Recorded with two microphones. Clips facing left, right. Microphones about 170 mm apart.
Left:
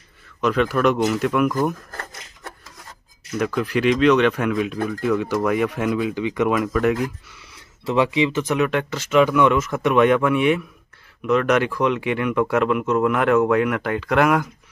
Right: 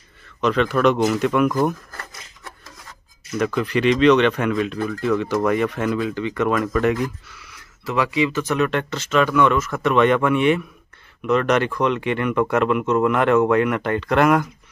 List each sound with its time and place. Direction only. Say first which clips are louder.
0.4 s speech: right 1 dB; 5° left (ahead or behind)
1.9 s rub: left 3 dB; 45° left (ahead or behind)
3.3 s speech: right 1 dB; 5° left (ahead or behind)
7.4 s speech: left 3 dB; 25° left (ahead or behind); by 14.5 s 5° left (ahead or behind)